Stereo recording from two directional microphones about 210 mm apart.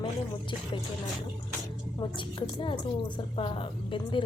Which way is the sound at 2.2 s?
25° left (ahead or behind).